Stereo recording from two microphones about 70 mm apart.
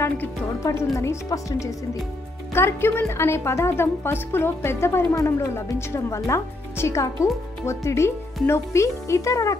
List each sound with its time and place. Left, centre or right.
0.6 s speech: left
2.5 s a woman's voice: left